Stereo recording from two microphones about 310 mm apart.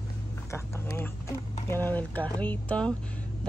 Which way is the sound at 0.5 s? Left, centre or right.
Centre.